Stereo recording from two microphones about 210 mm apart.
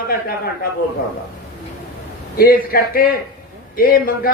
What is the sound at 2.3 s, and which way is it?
A man's voice, 45° left (ahead or behind).